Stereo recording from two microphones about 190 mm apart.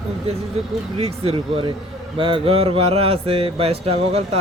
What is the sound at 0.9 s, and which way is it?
Speech, 30° right (ahead or behind).